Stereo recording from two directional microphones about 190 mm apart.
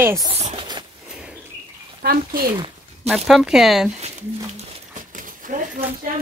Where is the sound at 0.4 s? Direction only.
35° right (ahead or behind).